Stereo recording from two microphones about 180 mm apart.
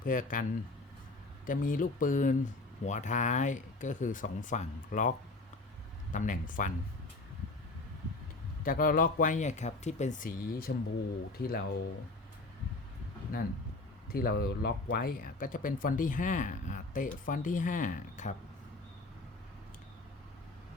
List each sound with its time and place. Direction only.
0.0 s speech: 50° left (ahead or behind)
1.5 s speech: 50° left (ahead or behind)
8.6 s speech: 50° left (ahead or behind)
14.1 s speech: 55° left (ahead or behind)